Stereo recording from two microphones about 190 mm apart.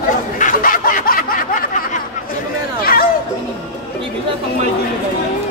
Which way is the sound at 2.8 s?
50° left (ahead or behind).